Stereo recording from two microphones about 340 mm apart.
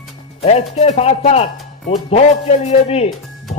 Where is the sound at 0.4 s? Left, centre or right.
Centre.